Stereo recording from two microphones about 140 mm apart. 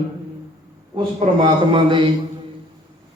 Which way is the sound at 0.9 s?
35° right (ahead or behind).